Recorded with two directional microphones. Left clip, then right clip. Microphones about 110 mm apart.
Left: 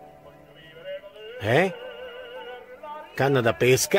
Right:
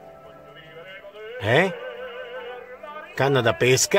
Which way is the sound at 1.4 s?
15° left (ahead or behind).